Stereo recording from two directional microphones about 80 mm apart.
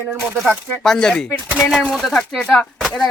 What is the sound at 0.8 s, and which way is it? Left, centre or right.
Speech, centre.